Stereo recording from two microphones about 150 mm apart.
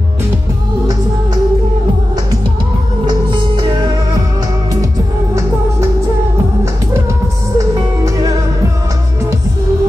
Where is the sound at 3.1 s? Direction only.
30° right (ahead or behind).